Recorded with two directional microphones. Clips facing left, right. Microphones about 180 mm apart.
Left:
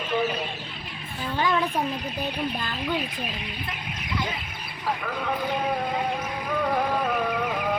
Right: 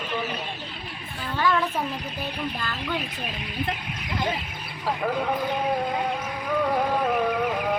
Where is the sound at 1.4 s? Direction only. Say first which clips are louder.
Right 1 dB; 20° left (ahead or behind).